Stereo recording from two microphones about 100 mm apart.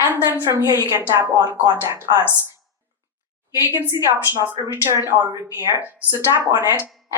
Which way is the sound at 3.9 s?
40° right (ahead or behind).